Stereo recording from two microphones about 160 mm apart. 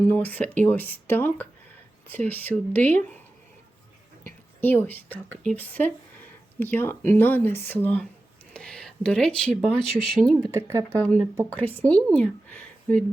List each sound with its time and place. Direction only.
0.1 s speech: 10° left (ahead or behind)
4.6 s speech: 15° left (ahead or behind)
10.5 s speech: 20° right (ahead or behind)
10.8 s speech: 5° left (ahead or behind)